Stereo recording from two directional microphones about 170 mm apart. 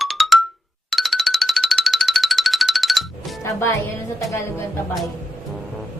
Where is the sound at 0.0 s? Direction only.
Centre (ahead or behind).